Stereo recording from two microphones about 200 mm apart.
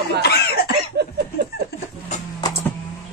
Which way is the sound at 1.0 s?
55° right (ahead or behind).